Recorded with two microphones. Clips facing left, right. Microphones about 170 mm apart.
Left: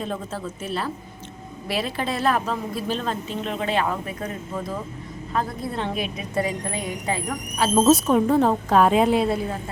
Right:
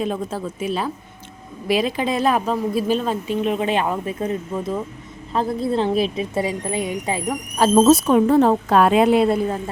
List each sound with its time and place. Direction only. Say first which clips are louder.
0.0 s a woman's voice: right 5 dB; 15° right (ahead or behind)
7.8 s speech: right 3 dB; 75° right (ahead or behind)